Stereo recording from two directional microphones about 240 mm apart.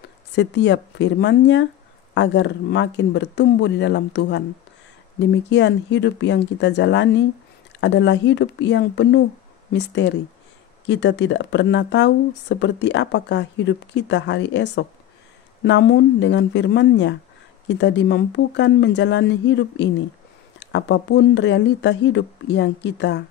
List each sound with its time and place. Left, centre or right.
0.3 s speech: left